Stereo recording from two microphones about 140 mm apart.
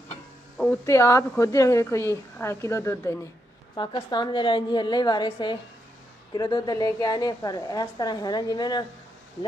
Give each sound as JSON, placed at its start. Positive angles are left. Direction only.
{"t": 0.8, "sound": "a woman's voice", "side_deg": 20}
{"t": 3.7, "sound": "a woman's voice", "side_deg": 35}